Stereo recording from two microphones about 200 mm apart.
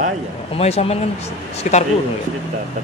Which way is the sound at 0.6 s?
30° left (ahead or behind).